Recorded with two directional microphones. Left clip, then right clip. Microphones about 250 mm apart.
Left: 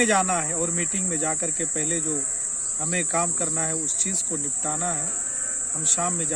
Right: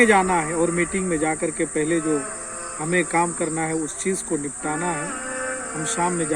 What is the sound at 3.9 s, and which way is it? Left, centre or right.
Speech, left.